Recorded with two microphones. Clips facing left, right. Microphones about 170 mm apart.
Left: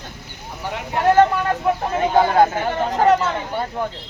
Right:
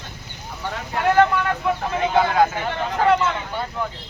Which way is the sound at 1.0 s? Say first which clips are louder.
Left 2 dB; 35° left (ahead or behind).